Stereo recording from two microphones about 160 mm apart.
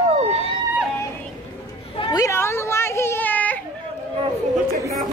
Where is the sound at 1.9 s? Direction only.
30° left (ahead or behind); by 3.6 s 10° left (ahead or behind).